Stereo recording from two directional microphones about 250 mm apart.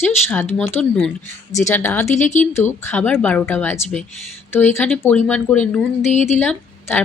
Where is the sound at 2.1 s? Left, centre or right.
Left.